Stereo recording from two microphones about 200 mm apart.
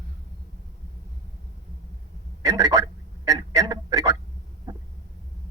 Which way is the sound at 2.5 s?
15° right (ahead or behind).